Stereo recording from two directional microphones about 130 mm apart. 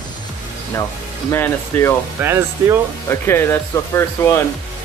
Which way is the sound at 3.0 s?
20° left (ahead or behind).